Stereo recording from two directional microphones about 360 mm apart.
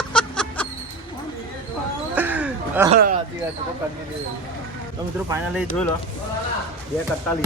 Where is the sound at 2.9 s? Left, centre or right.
Right.